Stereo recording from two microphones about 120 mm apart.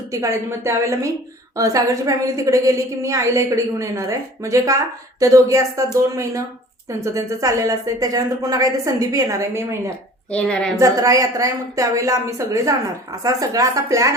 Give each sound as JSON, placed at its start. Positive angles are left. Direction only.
{"t": 0.1, "sound": "a woman's voice", "side_deg": -25}
{"t": 10.3, "sound": "a woman's voice", "side_deg": 10}
{"t": 10.8, "sound": "a woman's voice", "side_deg": -30}